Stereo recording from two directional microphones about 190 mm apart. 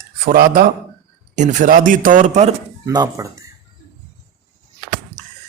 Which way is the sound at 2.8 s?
20° right (ahead or behind).